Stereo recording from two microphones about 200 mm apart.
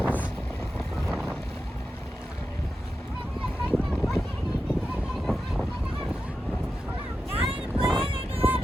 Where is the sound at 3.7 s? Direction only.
Centre (ahead or behind).